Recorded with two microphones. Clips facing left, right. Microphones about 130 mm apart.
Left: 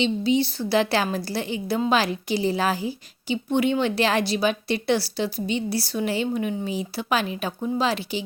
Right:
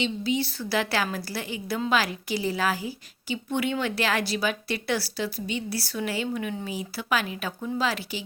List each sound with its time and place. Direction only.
0.0 s a woman's voice: 25° left (ahead or behind)